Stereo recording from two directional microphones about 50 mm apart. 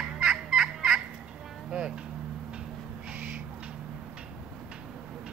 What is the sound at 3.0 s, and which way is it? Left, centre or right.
Owl, right.